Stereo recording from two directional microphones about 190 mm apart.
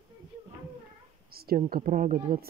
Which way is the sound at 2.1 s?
30° right (ahead or behind).